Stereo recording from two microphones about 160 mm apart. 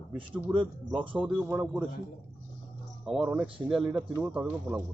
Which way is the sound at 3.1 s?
5° right (ahead or behind).